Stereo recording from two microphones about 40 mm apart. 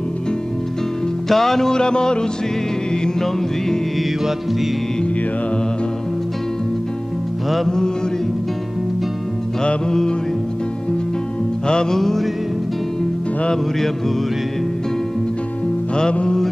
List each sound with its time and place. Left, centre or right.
1.3 s music: centre
7.4 s music: centre
9.6 s music: centre
11.6 s music: centre
12.0 s music: centre
13.7 s music: centre
16.0 s music: left